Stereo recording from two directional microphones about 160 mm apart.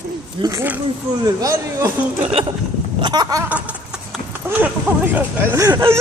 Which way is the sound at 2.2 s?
40° right (ahead or behind).